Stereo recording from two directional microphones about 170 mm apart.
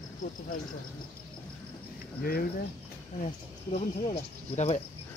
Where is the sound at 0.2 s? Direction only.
50° left (ahead or behind).